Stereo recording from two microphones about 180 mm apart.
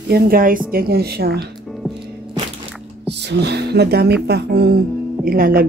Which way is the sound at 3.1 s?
70° right (ahead or behind).